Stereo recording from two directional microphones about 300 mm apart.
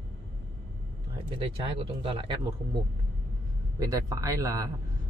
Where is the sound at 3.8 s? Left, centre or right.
Centre.